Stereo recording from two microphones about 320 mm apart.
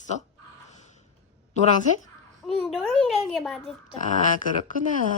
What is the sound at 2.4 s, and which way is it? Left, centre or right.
Speech, centre.